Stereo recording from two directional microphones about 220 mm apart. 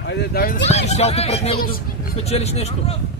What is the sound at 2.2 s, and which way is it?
Speech, 30° left (ahead or behind).